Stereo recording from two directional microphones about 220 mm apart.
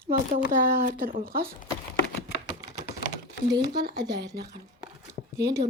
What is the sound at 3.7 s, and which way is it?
Speech, 50° right (ahead or behind).